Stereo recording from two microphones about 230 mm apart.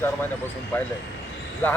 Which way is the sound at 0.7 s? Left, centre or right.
Centre.